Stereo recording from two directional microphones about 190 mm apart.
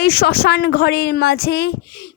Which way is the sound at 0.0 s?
55° left (ahead or behind).